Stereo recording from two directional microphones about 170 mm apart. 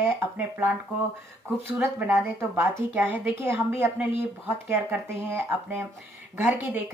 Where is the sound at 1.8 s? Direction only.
15° right (ahead or behind).